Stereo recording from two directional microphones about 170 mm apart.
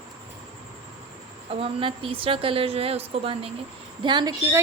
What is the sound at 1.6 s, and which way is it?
A woman's voice, 30° right (ahead or behind).